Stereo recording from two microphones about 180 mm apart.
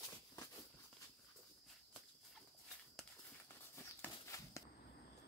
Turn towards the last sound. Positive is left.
turn(degrees=15)  # may be behind; listen again after turning